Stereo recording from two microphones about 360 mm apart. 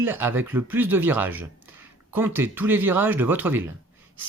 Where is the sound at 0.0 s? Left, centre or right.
Centre.